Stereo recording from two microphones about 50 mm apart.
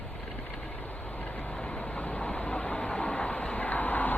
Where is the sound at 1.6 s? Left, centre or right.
Left.